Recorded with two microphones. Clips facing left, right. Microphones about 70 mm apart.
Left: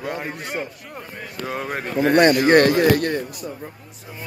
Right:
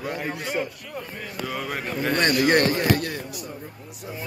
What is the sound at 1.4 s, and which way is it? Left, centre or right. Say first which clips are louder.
Speech: left 3 dB; left.